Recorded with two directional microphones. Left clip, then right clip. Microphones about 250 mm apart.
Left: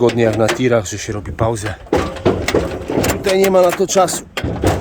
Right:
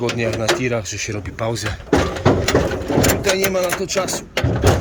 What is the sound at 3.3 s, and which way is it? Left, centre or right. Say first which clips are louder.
Speech: left 7 dB; left.